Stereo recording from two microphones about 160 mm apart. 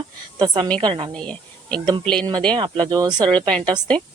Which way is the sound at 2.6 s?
25° right (ahead or behind).